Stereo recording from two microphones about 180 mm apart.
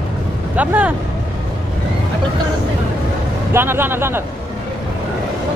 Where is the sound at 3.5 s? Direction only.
10° right (ahead or behind).